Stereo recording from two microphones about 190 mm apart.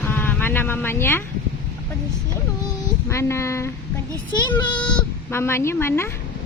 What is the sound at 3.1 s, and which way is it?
Speech, 15° left (ahead or behind).